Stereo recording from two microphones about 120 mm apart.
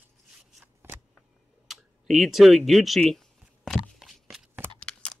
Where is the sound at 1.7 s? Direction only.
Centre (ahead or behind).